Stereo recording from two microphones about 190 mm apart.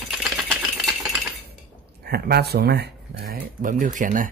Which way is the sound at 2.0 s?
55° right (ahead or behind).